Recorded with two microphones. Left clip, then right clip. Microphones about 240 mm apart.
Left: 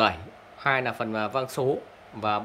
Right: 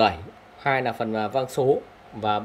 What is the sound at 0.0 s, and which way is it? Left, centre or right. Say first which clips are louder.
Speech: right 3 dB; centre.